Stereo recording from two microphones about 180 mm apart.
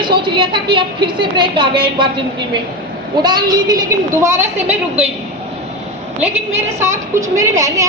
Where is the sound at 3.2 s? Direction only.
20° right (ahead or behind).